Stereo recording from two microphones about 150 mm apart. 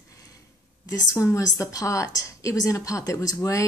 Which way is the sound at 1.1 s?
20° left (ahead or behind).